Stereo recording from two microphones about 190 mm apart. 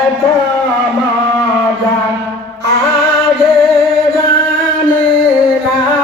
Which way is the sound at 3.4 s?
Centre (ahead or behind).